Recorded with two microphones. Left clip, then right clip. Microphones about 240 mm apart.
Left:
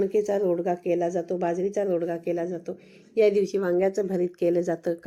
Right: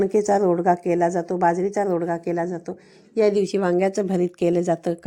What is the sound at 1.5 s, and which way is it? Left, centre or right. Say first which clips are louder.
Speech: right 8 dB; right.